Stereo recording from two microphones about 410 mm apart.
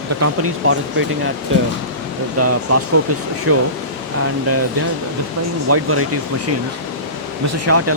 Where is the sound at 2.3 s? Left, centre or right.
Right.